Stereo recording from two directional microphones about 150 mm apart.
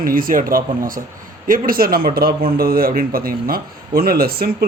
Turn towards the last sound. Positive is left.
turn(degrees=-90)